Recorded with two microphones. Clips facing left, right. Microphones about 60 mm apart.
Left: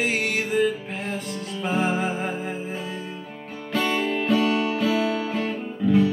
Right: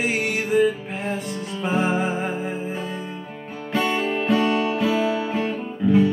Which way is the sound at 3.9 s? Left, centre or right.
Right.